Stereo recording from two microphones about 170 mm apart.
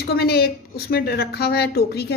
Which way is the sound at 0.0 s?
70° left (ahead or behind).